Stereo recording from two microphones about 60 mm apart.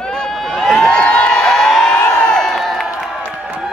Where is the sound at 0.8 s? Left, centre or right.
Centre.